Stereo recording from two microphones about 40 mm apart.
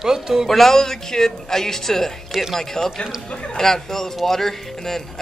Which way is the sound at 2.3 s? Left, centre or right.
Centre.